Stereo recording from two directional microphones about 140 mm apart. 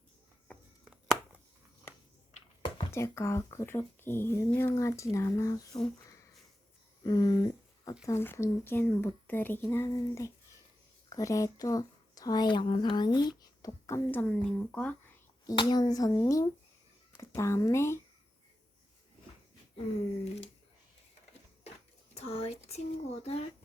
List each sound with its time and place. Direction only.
2.3 s a sound: 55° left (ahead or behind)
2.9 s speech: 20° left (ahead or behind)
7.0 s speech: 25° left (ahead or behind)
8.0 s speech: 15° left (ahead or behind)
13.8 s speech: 15° left (ahead or behind)
15.4 s speech: 30° left (ahead or behind)
22.1 s speech: 50° left (ahead or behind)